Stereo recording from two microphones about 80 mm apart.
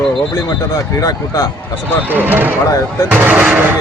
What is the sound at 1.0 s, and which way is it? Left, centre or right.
Speech, left.